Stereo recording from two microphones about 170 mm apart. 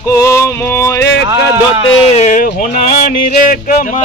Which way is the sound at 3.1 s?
50° left (ahead or behind).